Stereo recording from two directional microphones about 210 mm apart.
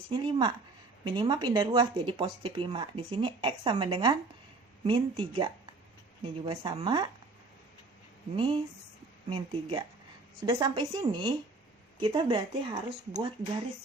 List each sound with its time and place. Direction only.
0.1 s speech: 20° right (ahead or behind)
8.4 s speech: 25° right (ahead or behind)